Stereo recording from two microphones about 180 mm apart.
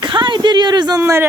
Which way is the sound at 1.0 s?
10° right (ahead or behind).